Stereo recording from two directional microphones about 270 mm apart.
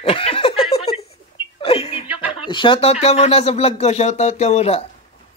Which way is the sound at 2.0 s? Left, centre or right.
Right.